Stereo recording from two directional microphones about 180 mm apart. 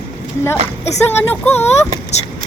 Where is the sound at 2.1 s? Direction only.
40° left (ahead or behind).